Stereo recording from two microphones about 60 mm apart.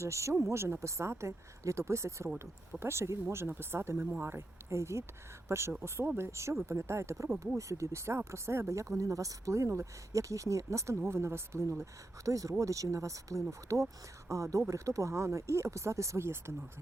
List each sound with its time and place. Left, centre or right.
0.0 s speech: right
12.2 s speech: right